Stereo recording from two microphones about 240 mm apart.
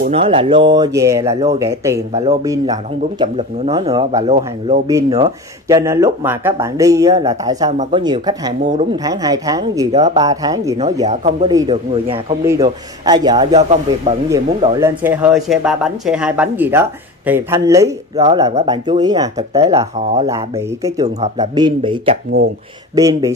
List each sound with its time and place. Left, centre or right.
0.1 s speech: right
7.7 s speech: right
8.0 s speech: centre
9.9 s speech: right
10.2 s speech: centre
11.1 s speech: right
14.3 s speech: centre